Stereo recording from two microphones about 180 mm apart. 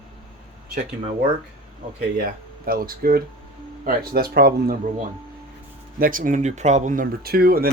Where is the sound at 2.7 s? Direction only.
55° right (ahead or behind).